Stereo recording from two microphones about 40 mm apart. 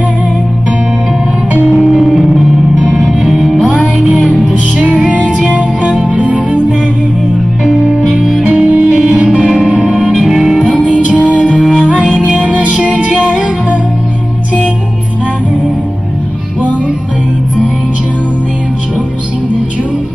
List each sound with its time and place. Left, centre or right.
1.9 s music: centre
2.8 s music: centre
3.3 s music: centre
4.5 s music: right
8.2 s music: centre
8.6 s music: right
9.4 s music: centre
10.1 s music: centre
11.3 s music: left
12.5 s music: right